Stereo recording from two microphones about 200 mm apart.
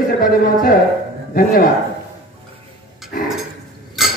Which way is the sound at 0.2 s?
45° left (ahead or behind).